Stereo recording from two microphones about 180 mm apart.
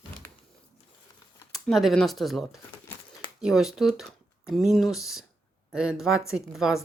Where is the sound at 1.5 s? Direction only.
Centre (ahead or behind).